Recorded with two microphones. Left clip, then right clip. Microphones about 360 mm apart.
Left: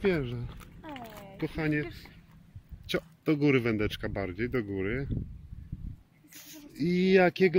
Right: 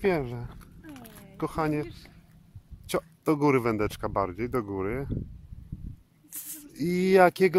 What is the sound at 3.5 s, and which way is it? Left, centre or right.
Speech, right.